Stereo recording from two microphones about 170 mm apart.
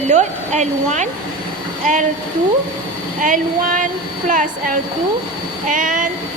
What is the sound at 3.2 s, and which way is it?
Speech, 50° right (ahead or behind).